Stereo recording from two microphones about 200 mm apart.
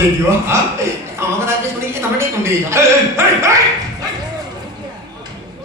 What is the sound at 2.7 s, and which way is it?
Speech, 15° right (ahead or behind).